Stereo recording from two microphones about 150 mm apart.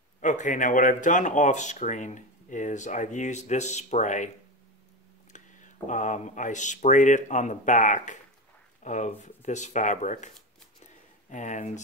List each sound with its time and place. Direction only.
0.2 s speech: 55° left (ahead or behind)
5.3 s speech: 55° left (ahead or behind)